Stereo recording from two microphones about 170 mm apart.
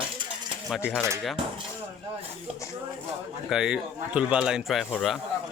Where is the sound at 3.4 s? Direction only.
5° right (ahead or behind).